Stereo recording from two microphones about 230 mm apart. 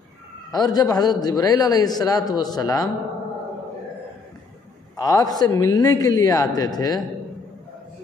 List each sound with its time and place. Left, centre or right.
0.5 s a man's voice: centre
4.9 s a man's voice: centre